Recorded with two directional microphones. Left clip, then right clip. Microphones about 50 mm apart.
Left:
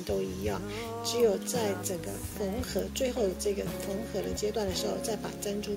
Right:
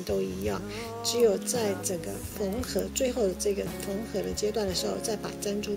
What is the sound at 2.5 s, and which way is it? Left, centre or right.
Speech, right.